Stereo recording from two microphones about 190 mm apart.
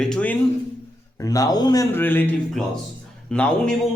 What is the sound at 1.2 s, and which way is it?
A man's voice, 20° left (ahead or behind).